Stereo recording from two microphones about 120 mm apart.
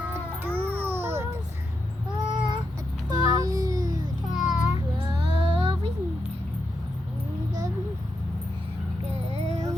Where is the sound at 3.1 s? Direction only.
30° right (ahead or behind).